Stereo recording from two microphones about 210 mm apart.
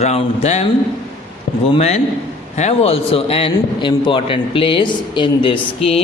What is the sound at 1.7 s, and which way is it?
A man's voice, 30° left (ahead or behind).